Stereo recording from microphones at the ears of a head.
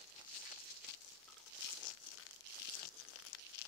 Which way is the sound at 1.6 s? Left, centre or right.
Left.